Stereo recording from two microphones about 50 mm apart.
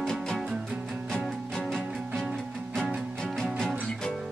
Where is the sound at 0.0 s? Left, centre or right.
Centre.